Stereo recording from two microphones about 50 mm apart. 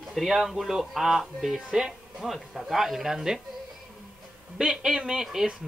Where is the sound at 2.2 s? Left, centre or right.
Centre.